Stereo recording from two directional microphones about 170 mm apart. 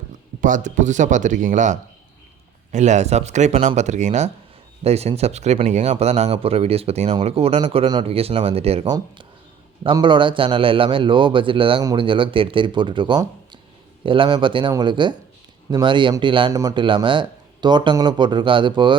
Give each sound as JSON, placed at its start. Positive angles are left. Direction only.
{"t": 0.4, "sound": "a man's voice", "side_deg": -50}